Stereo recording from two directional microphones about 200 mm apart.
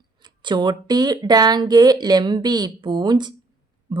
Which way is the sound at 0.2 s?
20° right (ahead or behind).